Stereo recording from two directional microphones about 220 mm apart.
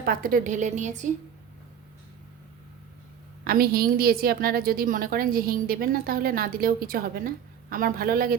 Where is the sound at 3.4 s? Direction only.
45° right (ahead or behind).